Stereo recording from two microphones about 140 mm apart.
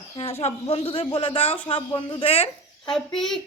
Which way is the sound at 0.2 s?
45° left (ahead or behind).